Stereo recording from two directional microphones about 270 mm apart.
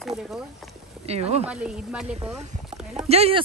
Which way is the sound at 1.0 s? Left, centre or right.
Right.